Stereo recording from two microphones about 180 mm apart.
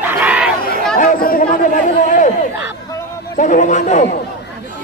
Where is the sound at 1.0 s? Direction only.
50° left (ahead or behind).